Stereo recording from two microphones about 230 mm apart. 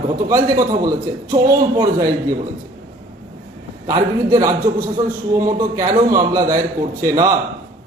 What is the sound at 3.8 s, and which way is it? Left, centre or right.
A man's voice, centre.